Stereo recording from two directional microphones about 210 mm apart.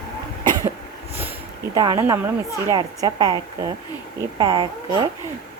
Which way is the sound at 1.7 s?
20° right (ahead or behind).